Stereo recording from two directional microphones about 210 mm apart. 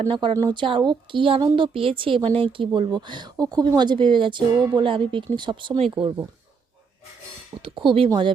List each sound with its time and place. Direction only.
0.0 s speech: 25° right (ahead or behind)
7.6 s speech: 25° right (ahead or behind)